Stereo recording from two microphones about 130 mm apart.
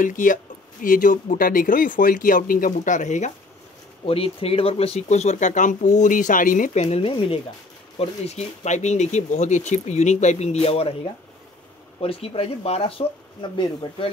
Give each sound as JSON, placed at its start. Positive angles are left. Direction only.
{"t": 0.0, "sound": "speech", "side_deg": 90}
{"t": 4.0, "sound": "speech", "side_deg": 45}
{"t": 7.0, "sound": "speech", "side_deg": 45}
{"t": 8.0, "sound": "speech", "side_deg": 55}
{"t": 12.0, "sound": "speech", "side_deg": 45}